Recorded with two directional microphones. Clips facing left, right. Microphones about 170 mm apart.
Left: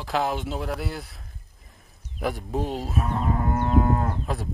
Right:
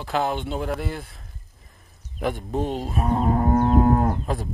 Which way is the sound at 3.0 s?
40° right (ahead or behind).